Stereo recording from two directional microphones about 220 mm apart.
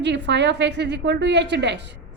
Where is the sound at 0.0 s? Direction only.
50° right (ahead or behind).